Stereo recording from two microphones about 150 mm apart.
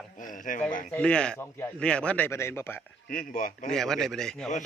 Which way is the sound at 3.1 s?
70° left (ahead or behind).